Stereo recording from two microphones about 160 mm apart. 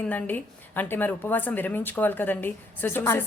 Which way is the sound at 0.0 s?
10° left (ahead or behind).